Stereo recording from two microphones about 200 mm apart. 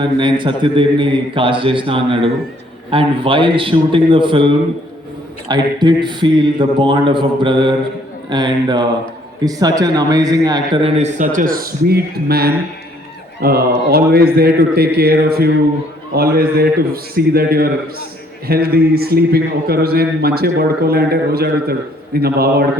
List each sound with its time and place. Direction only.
0.0 s a man's voice: 25° right (ahead or behind)
10.9 s a man's voice: 35° right (ahead or behind)